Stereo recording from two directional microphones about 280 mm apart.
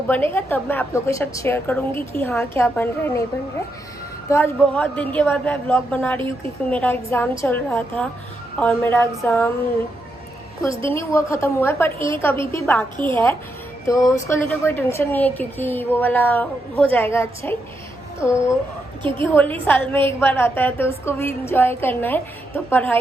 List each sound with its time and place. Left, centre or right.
0.1 s a woman's voice: centre
4.3 s a woman's voice: centre
6.1 s a woman's voice: centre
6.7 s a woman's voice: centre
10.7 s a woman's voice: centre
10.9 s a woman's voice: centre
11.9 s a woman's voice: centre
12.2 s a woman's voice: centre
13.8 s a woman's voice: centre